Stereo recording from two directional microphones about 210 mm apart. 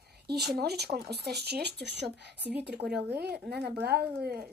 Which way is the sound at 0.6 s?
50° right (ahead or behind).